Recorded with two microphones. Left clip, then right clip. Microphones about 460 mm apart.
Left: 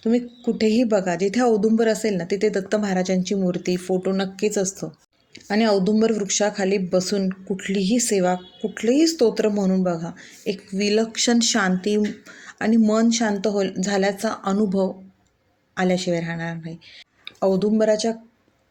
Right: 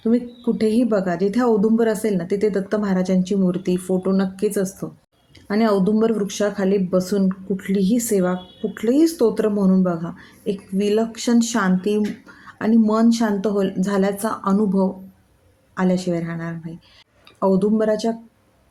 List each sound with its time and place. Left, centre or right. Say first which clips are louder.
0.0 s speech: right 1 dB; right